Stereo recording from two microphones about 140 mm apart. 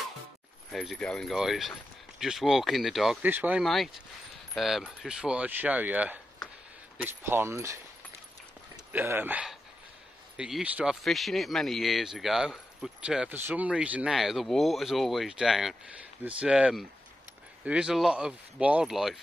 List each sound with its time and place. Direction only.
0.7 s speech: centre (ahead or behind)
3.2 s speech: 15° right (ahead or behind)
3.6 s speech: centre (ahead or behind); by 7.8 s 20° right (ahead or behind)
8.9 s speech: 15° right (ahead or behind)